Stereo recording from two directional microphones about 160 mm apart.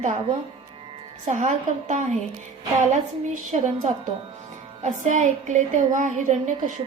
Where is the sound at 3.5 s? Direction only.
50° right (ahead or behind).